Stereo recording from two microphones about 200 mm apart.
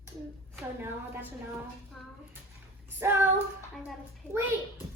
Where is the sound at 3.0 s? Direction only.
10° right (ahead or behind).